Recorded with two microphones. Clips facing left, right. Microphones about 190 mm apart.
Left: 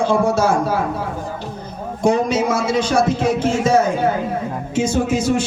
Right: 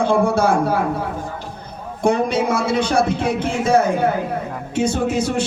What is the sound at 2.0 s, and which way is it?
A man's voice, 60° right (ahead or behind).